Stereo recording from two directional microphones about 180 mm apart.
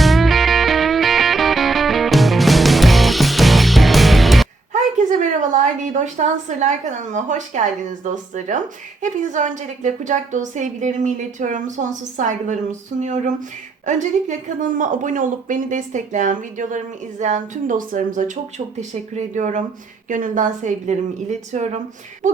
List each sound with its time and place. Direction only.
0.0 s music: centre (ahead or behind)
4.7 s a woman's voice: 45° right (ahead or behind)